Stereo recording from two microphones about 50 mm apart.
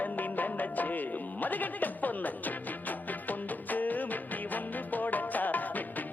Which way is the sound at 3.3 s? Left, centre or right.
Left.